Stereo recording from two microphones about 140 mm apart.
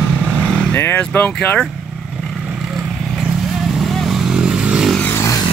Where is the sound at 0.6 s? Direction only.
15° left (ahead or behind).